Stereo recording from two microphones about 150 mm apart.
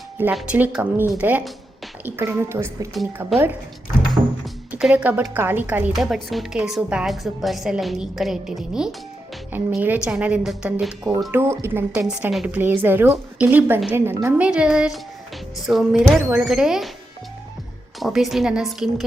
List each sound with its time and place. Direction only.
0.3 s a woman's voice: 10° right (ahead or behind)
4.2 s music: 25° right (ahead or behind)
4.7 s a woman's voice: 10° right (ahead or behind)
6.0 s a woman's voice: centre (ahead or behind)
18.0 s a woman's voice: centre (ahead or behind)